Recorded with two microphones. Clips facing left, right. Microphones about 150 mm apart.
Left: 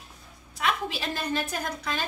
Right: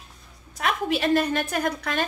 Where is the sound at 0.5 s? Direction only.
45° right (ahead or behind).